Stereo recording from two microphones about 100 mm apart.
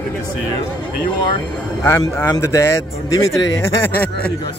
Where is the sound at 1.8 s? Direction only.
25° left (ahead or behind).